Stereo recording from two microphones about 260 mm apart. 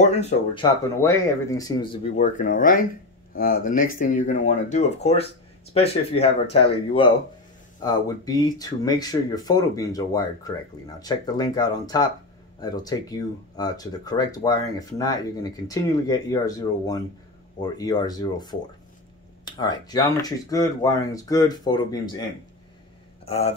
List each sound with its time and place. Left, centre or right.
0.0 s speech: left
1.0 s speech: centre
2.1 s speech: left
23.2 s speech: left